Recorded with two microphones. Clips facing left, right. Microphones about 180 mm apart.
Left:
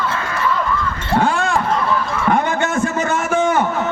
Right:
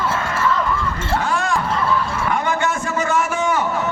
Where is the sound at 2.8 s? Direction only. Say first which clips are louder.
Left 1 dB; 25° left (ahead or behind).